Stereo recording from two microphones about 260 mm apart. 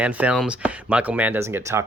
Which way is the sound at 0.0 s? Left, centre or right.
Centre.